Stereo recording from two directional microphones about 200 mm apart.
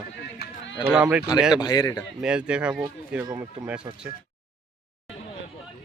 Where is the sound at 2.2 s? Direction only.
5° right (ahead or behind).